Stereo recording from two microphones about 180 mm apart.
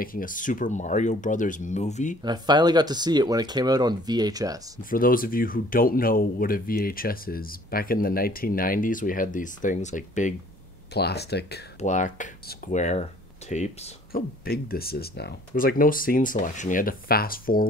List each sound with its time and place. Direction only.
0.0 s speech: 50° left (ahead or behind)
2.2 s speech: 25° right (ahead or behind)
4.8 s speech: 50° left (ahead or behind)
10.9 s speech: 65° left (ahead or behind)
11.8 s speech: 45° left (ahead or behind)
14.1 s speech: 55° left (ahead or behind)